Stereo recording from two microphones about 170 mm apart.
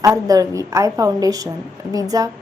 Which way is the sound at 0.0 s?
20° right (ahead or behind).